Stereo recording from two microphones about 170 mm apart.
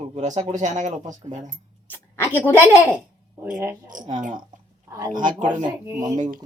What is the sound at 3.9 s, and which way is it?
Speech, 50° right (ahead or behind).